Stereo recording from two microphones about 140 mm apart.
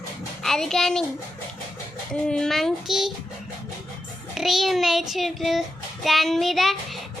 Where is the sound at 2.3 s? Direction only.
5° left (ahead or behind).